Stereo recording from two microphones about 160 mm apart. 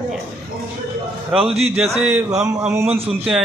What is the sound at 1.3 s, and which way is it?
Speech, 40° right (ahead or behind).